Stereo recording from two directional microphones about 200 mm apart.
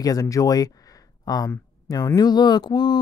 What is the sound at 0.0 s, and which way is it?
Speech, 15° left (ahead or behind).